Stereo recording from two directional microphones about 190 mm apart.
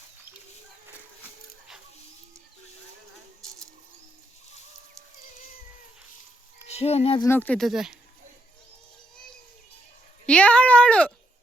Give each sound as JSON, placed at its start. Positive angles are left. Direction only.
{"t": 6.7, "sound": "speech", "side_deg": 35}
{"t": 7.2, "sound": "speech", "side_deg": 10}
{"t": 10.2, "sound": "speech", "side_deg": 5}